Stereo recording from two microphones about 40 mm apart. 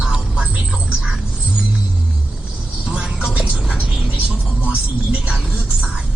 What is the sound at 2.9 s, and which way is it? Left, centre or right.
Speech, right.